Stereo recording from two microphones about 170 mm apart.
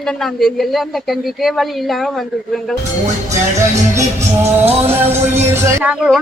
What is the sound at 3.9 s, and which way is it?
Speech, 15° right (ahead or behind).